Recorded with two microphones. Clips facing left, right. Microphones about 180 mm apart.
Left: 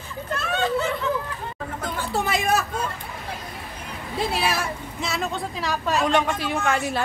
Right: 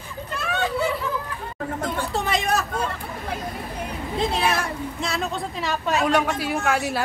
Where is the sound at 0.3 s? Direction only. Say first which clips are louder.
Left 2 dB; 15° right (ahead or behind).